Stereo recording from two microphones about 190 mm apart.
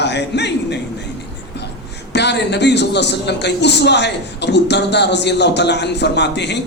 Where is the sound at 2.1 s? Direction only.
65° left (ahead or behind).